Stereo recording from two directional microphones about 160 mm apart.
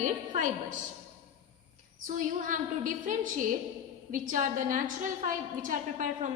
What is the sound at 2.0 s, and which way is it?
A woman's voice, 55° right (ahead or behind).